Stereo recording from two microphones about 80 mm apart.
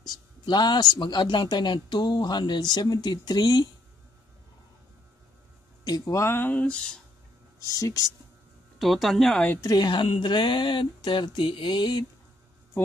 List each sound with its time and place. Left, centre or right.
0.0 s speech: left
5.9 s speech: left
6.2 s speech: left
6.5 s speech: centre
7.6 s speech: left
8.7 s speech: centre
9.6 s speech: left
9.8 s speech: left